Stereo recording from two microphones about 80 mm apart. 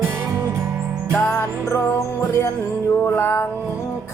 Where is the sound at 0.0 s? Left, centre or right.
Right.